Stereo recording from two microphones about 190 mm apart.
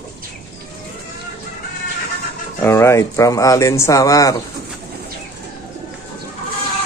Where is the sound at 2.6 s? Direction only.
15° left (ahead or behind).